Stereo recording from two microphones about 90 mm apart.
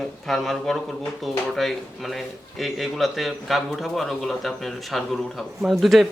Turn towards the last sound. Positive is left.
turn(degrees=0)  # may be behind; listen again after turning